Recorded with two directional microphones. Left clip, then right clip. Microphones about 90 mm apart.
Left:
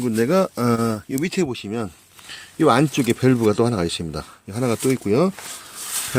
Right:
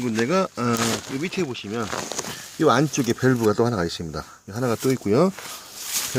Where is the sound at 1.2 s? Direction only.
65° left (ahead or behind).